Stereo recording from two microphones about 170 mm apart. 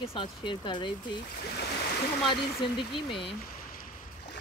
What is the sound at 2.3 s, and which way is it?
Speech, 30° left (ahead or behind).